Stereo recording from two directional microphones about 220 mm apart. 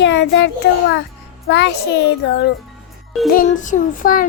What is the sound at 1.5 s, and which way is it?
A child's voice, 50° left (ahead or behind).